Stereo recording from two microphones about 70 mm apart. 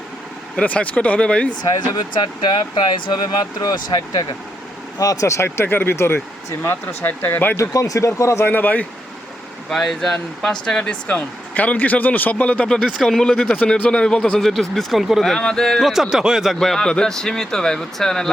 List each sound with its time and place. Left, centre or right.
0.6 s speech: left
1.6 s speech: left
4.9 s speech: left
7.5 s speech: left
8.4 s speech: left
9.6 s a man's voice: centre
13.4 s speech: centre
15.2 s a man's voice: centre
16.6 s speech: centre